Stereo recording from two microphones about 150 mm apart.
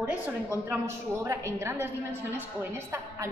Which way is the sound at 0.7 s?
15° right (ahead or behind).